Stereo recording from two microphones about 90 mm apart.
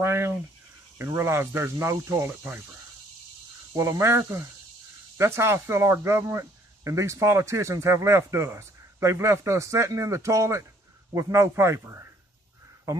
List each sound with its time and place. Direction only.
0.0 s speech: 30° right (ahead or behind)
3.7 s speech: 35° right (ahead or behind)